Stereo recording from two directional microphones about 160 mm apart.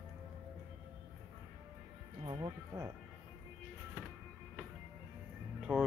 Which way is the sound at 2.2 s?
30° right (ahead or behind).